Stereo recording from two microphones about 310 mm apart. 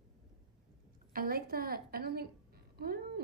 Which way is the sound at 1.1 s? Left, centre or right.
Right.